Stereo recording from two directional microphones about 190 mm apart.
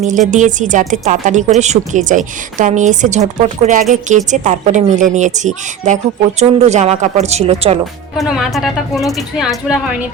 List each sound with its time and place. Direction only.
0.0 s a woman's voice: 40° right (ahead or behind)
8.2 s speech: centre (ahead or behind)